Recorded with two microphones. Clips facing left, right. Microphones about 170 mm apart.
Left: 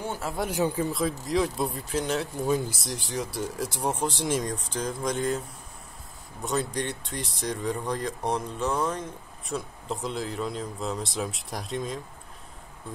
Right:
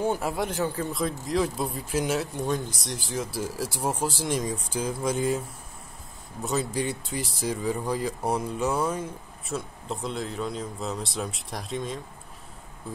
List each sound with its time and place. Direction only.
0.0 s speech: 15° right (ahead or behind)
0.6 s speech: 15° left (ahead or behind)
0.9 s speech: centre (ahead or behind)
6.4 s speech: centre (ahead or behind)